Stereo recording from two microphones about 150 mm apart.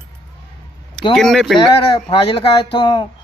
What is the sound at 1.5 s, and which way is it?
Speech, 35° left (ahead or behind).